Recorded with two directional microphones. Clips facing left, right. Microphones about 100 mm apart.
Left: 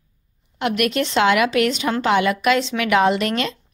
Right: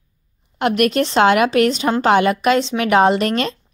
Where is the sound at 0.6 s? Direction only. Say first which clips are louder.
Right 4 dB; 45° right (ahead or behind).